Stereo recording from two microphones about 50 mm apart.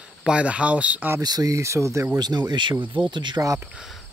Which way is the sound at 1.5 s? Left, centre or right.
Right.